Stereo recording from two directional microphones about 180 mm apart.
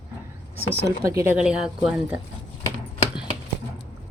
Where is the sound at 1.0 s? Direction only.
15° right (ahead or behind).